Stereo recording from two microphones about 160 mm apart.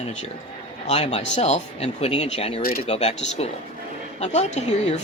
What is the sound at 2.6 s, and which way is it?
Speech, 65° left (ahead or behind).